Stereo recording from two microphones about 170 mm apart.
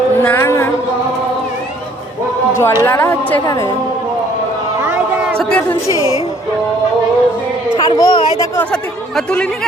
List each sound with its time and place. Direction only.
0.2 s a sound: 15° left (ahead or behind)
2.5 s a woman's voice: 15° left (ahead or behind)
3.4 s a woman's voice: 20° left (ahead or behind)
4.8 s a sound: 15° right (ahead or behind)
5.4 s speech: 5° left (ahead or behind)
5.9 s a woman's voice: 20° right (ahead or behind)
7.8 s a child's voice: 20° left (ahead or behind)
8.5 s speech: 5° left (ahead or behind)